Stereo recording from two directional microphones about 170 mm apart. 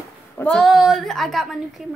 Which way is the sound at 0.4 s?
5° left (ahead or behind).